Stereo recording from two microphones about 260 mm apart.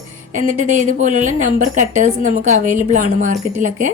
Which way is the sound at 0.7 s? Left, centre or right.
Right.